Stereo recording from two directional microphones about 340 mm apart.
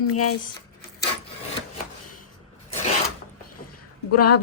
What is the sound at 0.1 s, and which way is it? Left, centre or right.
Speech, left.